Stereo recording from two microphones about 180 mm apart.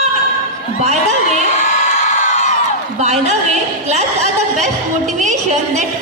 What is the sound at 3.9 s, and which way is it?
Speech, 40° right (ahead or behind).